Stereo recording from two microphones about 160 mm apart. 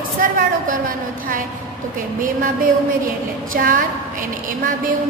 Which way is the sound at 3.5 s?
60° right (ahead or behind).